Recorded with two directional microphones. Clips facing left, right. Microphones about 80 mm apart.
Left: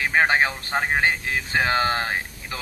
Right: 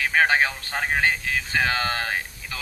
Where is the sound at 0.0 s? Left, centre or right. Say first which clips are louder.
Left 1 dB; left.